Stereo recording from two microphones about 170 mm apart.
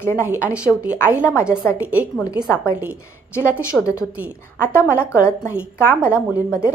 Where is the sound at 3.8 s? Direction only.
20° left (ahead or behind).